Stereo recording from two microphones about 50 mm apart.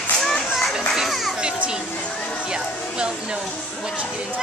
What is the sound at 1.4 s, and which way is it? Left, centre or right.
Music, centre.